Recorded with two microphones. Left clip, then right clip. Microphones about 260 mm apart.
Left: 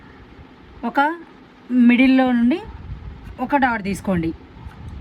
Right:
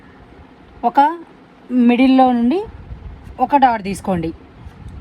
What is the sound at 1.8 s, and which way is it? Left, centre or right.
A woman's voice, right.